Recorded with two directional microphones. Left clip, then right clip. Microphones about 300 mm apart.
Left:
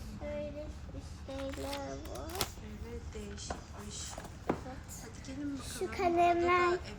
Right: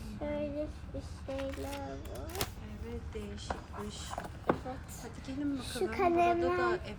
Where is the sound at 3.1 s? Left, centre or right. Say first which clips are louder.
Right 3 dB; centre.